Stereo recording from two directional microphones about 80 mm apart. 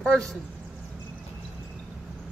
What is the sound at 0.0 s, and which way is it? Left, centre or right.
Speech, centre.